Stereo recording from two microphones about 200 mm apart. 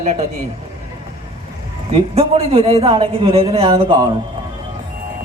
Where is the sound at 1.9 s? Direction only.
30° right (ahead or behind).